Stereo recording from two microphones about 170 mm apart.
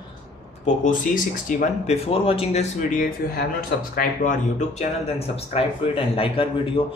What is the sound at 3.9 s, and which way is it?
Speech, 55° left (ahead or behind).